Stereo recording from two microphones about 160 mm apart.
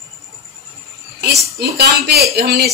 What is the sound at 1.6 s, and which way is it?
Speech, 85° right.